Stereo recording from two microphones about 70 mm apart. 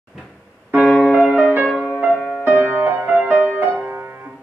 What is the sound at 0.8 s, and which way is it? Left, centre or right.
Music, centre.